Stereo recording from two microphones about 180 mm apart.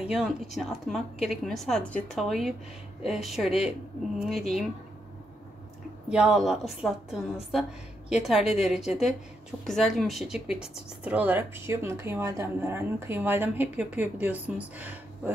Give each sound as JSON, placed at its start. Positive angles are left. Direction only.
{"t": 0.0, "sound": "a woman's voice", "side_deg": 0}
{"t": 6.0, "sound": "a woman's voice", "side_deg": -5}